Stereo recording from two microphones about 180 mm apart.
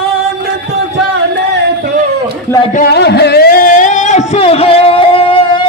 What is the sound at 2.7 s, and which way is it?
Music, 55° left (ahead or behind).